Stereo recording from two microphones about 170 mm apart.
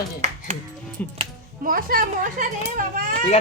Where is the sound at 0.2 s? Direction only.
40° right (ahead or behind).